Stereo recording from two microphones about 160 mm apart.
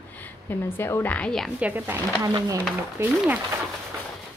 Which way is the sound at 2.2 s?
25° right (ahead or behind).